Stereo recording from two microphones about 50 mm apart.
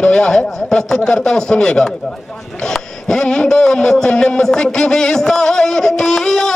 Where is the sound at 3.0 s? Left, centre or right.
Centre.